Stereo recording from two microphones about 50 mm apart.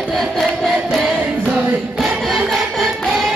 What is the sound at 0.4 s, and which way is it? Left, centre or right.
Chant, centre.